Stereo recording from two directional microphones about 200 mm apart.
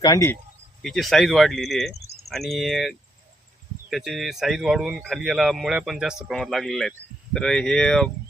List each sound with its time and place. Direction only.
0.0 s speech: 15° left (ahead or behind)
0.8 s speech: centre (ahead or behind)